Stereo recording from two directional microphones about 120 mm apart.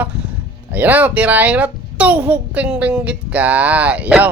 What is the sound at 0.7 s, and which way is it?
A child's voice, 15° right (ahead or behind).